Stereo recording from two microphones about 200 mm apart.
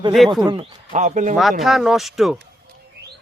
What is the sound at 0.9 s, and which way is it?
Speech, 40° right (ahead or behind).